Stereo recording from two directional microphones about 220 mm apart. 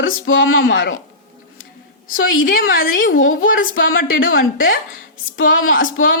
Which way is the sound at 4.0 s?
40° left (ahead or behind).